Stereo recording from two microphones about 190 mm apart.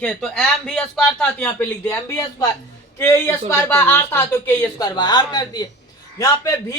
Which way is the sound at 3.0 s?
10° left (ahead or behind).